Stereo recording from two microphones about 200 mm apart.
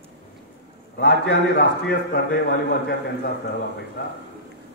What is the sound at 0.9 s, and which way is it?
A man's voice, 55° left (ahead or behind).